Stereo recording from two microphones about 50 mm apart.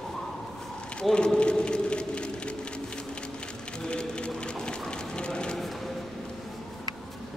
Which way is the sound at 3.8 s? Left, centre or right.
Centre.